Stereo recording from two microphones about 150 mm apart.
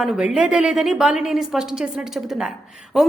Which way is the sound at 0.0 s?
Centre (ahead or behind).